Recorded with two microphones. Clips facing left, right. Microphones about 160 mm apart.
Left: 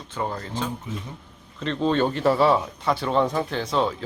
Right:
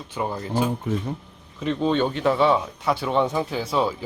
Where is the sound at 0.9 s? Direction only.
60° right (ahead or behind).